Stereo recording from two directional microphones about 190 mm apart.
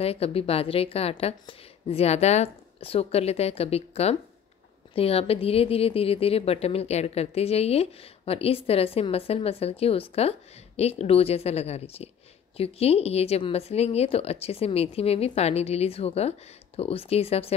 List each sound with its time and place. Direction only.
0.0 s a woman's voice: 30° left (ahead or behind)